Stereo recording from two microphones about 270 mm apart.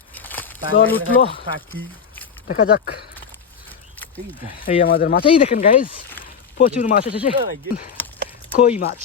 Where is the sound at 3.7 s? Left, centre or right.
Centre.